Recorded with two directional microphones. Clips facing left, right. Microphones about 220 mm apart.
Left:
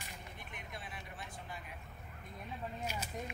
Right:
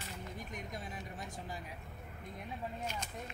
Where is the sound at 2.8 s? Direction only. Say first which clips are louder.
Left 1 dB; 10° left (ahead or behind).